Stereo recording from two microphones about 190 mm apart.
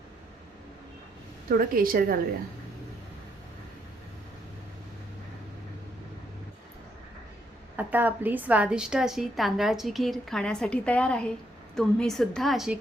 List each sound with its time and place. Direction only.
1.5 s a woman's voice: 50° right (ahead or behind)
7.8 s a woman's voice: 10° right (ahead or behind)